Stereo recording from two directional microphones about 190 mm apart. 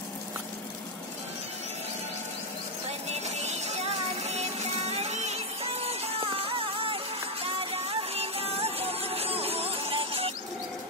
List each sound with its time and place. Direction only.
3.1 s music: 35° right (ahead or behind)